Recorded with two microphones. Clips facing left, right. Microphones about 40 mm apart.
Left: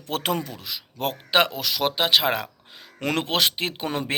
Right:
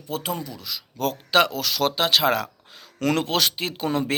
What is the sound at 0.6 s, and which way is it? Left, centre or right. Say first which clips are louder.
Speech: right 2 dB; left.